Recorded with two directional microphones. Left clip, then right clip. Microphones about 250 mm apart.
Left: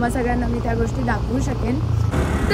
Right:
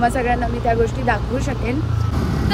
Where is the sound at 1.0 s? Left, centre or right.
Centre.